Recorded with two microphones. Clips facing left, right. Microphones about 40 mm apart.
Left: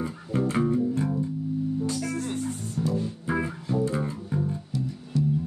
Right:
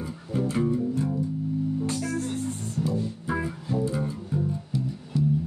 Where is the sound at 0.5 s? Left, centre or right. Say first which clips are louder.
Even; left.